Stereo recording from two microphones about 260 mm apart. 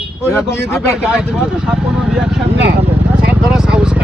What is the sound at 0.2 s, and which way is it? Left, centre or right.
Speech, centre.